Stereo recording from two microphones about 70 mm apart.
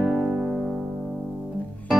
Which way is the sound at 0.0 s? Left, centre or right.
Centre.